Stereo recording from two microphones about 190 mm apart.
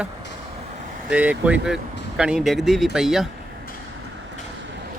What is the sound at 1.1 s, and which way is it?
Speech, 5° right (ahead or behind).